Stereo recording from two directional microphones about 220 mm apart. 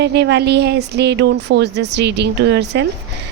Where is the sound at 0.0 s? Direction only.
50° right (ahead or behind).